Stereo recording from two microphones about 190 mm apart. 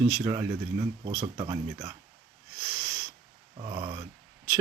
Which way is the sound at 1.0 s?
30° right (ahead or behind).